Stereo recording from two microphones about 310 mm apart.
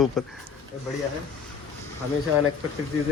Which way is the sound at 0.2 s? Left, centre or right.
Centre.